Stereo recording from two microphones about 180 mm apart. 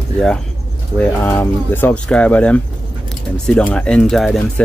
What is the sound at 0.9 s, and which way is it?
Speech, 10° left (ahead or behind).